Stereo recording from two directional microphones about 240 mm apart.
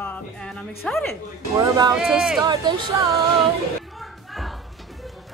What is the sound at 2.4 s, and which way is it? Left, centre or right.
Speech, centre.